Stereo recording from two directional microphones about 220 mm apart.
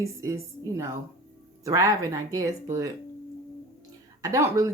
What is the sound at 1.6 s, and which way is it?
Speech, 15° right (ahead or behind).